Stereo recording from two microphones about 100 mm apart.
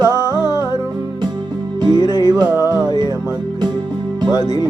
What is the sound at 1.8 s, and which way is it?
Music, 45° right (ahead or behind).